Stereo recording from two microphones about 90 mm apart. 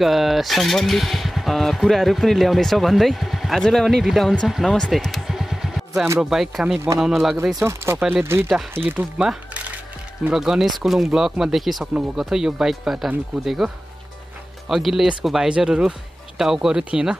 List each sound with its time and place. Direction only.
0.0 s speech: centre (ahead or behind)
4.6 s music: 10° left (ahead or behind)
6.1 s speech: 5° right (ahead or behind)
7.6 s speech: 30° right (ahead or behind); by 13.7 s centre (ahead or behind)
14.7 s speech: 5° right (ahead or behind)